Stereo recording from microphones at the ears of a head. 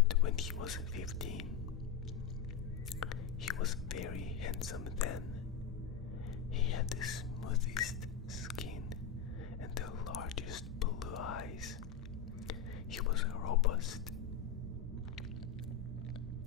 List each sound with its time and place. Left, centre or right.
0.1 s speech: left
3.0 s whispering: left
6.7 s speech: left
9.8 s whispering: left